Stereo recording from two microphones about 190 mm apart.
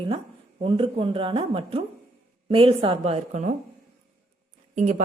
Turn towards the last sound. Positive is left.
turn(degrees=-40)  # may be behind; listen again after turning